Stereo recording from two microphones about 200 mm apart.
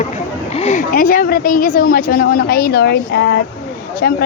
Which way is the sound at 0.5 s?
35° left (ahead or behind).